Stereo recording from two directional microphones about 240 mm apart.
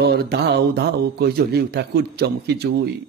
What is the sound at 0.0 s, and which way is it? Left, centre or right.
Speech, right.